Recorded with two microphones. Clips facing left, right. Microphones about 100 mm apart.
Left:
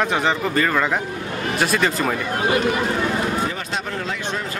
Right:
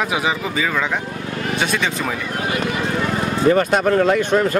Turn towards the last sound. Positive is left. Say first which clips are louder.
# right 10 dB
turn(degrees=-55)  # may be behind; listen again after turning